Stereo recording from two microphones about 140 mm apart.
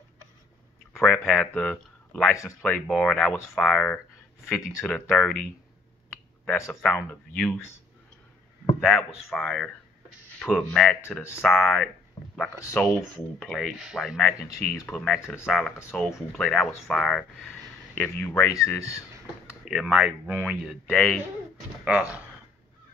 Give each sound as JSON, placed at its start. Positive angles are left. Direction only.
{"t": 0.9, "sound": "speech", "side_deg": 5}
{"t": 4.5, "sound": "speech", "side_deg": 20}
{"t": 4.8, "sound": "speech", "side_deg": 5}
{"t": 6.4, "sound": "speech", "side_deg": 20}
{"t": 6.7, "sound": "speech", "side_deg": 5}
{"t": 8.7, "sound": "speech", "side_deg": 0}
{"t": 13.0, "sound": "speech", "side_deg": 0}
{"t": 14.2, "sound": "speech", "side_deg": 10}
{"t": 15.4, "sound": "speech", "side_deg": 0}
{"t": 17.9, "sound": "speech", "side_deg": 15}
{"t": 19.6, "sound": "speech", "side_deg": 0}
{"t": 20.8, "sound": "speech", "side_deg": 5}
{"t": 21.8, "sound": "speech", "side_deg": -10}